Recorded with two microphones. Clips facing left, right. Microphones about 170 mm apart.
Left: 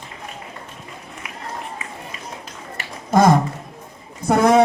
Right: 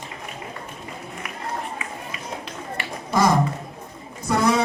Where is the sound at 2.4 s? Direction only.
50° left (ahead or behind).